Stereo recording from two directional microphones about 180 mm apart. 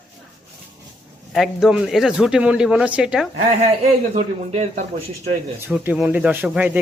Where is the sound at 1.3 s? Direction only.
Centre (ahead or behind).